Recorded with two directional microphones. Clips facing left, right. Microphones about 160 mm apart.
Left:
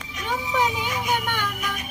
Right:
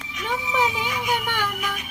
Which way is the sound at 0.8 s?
40° left (ahead or behind).